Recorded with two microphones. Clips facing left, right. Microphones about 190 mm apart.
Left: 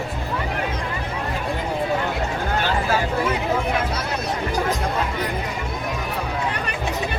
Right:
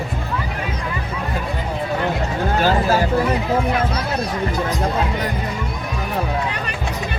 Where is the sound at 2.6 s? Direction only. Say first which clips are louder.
Right 7 dB; 40° right (ahead or behind).